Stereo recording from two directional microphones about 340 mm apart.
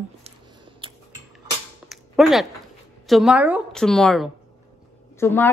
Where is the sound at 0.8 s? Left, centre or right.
Centre.